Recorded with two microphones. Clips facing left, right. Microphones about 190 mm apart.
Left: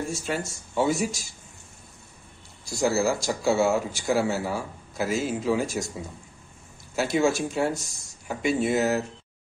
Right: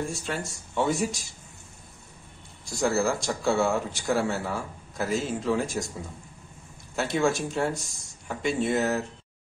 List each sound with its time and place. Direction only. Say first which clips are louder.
0.1 s speech: left 3 dB; 5° left (ahead or behind)
2.9 s speech: left 1 dB; centre (ahead or behind)
7.0 s speech: left 2 dB; 5° left (ahead or behind)